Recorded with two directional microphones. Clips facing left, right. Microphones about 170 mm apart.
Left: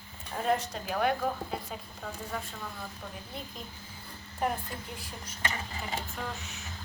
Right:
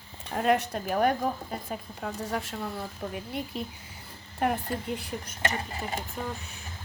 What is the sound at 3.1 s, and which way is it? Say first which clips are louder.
Speech: right 8 dB; 75° right (ahead or behind).